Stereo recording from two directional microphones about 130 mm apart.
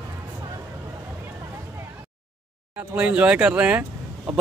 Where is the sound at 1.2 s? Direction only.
20° right (ahead or behind).